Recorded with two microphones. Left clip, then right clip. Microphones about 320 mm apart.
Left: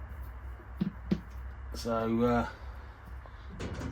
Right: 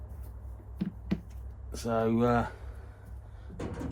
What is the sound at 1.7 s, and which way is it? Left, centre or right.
Speech, right.